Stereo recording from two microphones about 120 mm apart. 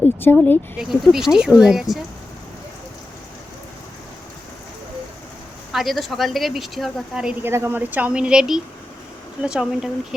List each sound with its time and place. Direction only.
0.0 s a sound: 15° left (ahead or behind)
0.8 s speech: 5° right (ahead or behind)
5.7 s speech: centre (ahead or behind)
7.4 s speech: 20° right (ahead or behind); by 10.2 s 5° right (ahead or behind)